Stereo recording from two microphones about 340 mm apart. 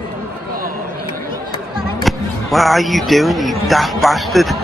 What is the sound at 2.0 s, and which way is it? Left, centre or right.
Speech, centre.